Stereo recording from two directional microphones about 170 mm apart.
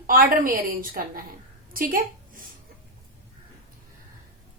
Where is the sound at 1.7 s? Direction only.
55° right (ahead or behind).